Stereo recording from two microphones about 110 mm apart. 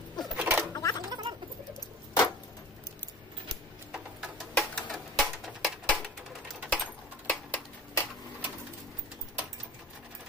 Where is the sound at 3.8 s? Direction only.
10° right (ahead or behind).